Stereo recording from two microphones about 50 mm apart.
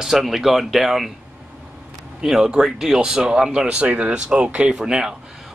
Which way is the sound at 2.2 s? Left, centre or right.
Centre.